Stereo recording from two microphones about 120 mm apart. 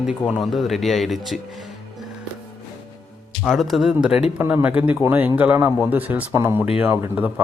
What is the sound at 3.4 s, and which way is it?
A man's voice, centre (ahead or behind).